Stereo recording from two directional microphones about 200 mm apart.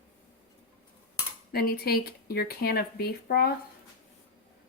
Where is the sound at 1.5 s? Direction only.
50° left (ahead or behind).